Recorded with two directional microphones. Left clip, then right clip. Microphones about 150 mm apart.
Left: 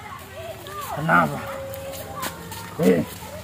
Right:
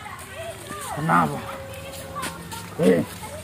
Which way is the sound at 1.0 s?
25° left (ahead or behind).